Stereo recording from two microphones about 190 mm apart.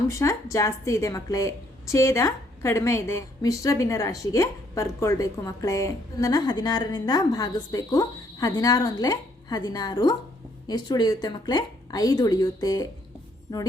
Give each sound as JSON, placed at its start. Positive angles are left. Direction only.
{"t": 0.1, "sound": "a woman's voice", "side_deg": 15}